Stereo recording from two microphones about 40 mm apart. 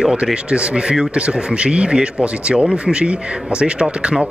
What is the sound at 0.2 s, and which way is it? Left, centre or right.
Speech, right.